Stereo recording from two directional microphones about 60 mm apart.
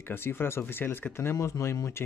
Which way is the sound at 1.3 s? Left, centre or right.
Left.